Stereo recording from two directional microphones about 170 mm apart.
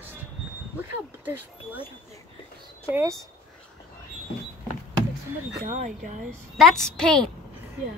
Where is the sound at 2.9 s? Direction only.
15° right (ahead or behind).